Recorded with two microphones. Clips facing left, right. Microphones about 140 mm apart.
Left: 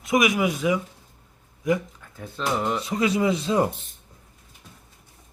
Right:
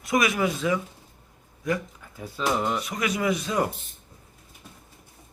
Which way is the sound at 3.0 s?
25° left (ahead or behind).